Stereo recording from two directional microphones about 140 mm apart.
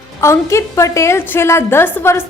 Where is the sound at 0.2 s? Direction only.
20° left (ahead or behind).